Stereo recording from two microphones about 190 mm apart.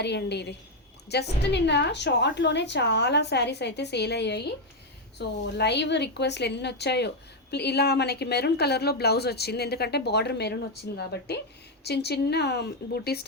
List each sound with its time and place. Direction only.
0.0 s a woman's voice: 65° left (ahead or behind)